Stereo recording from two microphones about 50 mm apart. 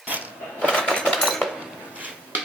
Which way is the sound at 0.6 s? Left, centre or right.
Centre.